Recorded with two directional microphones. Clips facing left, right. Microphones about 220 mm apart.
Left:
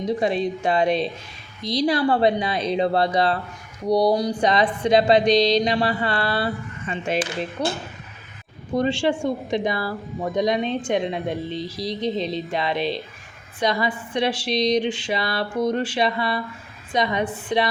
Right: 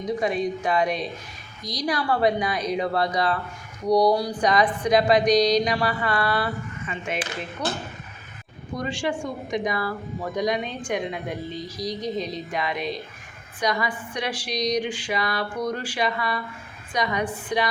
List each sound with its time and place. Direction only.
0.2 s speech: 30° left (ahead or behind)
11.5 s speech: centre (ahead or behind)
12.5 s speech: 30° left (ahead or behind)